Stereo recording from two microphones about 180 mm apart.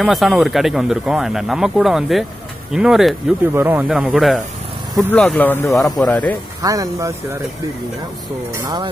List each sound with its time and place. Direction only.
0.0 s speech: centre (ahead or behind)
5.8 s speech: centre (ahead or behind)
6.6 s speech: 20° right (ahead or behind)